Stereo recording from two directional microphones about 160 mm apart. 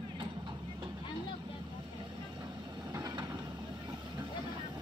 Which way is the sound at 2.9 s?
25° right (ahead or behind).